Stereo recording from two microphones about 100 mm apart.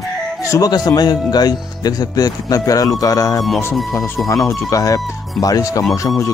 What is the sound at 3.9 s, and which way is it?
Speech, 25° left (ahead or behind).